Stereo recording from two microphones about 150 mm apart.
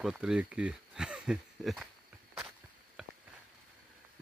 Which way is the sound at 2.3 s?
5° right (ahead or behind).